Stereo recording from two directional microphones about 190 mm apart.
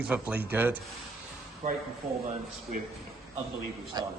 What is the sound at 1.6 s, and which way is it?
Speech, 35° right (ahead or behind).